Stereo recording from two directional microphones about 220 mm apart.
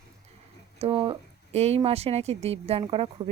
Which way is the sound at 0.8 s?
25° right (ahead or behind).